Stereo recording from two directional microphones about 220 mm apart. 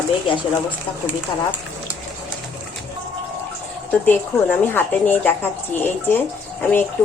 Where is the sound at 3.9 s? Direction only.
10° left (ahead or behind).